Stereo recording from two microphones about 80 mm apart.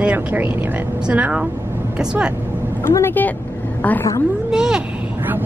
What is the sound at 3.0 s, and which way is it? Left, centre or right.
Speech, left.